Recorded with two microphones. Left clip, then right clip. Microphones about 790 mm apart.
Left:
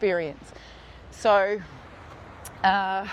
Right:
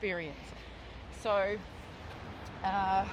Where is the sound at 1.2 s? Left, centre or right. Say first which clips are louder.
Left 10 dB; left.